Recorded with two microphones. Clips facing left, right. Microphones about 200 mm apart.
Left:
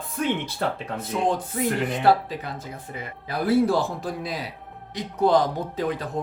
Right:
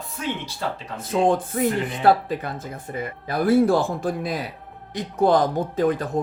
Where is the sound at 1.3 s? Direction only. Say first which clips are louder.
Right 3 dB; 50° right (ahead or behind).